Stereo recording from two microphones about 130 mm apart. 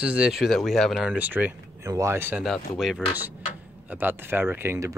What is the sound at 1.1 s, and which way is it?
Speech, 10° right (ahead or behind).